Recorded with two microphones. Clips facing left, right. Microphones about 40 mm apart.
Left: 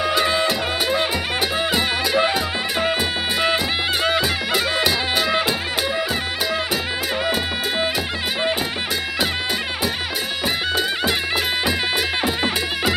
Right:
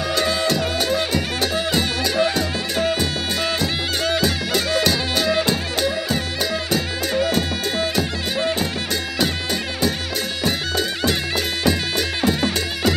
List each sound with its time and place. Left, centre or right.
0.0 s music: centre
12.2 s music: centre